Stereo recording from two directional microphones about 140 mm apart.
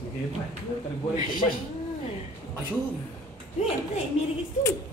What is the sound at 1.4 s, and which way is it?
Speech, 45° left (ahead or behind).